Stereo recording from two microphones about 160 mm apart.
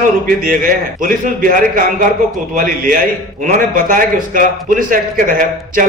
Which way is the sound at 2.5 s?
55° right (ahead or behind).